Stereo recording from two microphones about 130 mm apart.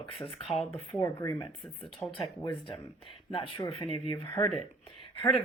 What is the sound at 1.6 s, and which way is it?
Speech, 5° left (ahead or behind).